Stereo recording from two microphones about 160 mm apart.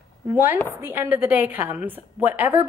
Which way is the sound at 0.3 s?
15° right (ahead or behind).